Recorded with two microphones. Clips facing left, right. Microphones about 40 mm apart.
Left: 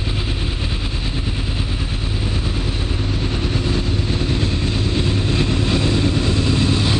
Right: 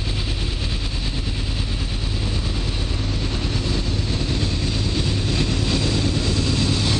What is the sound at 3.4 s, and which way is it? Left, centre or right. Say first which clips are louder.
Vehicle: left 4 dB; centre.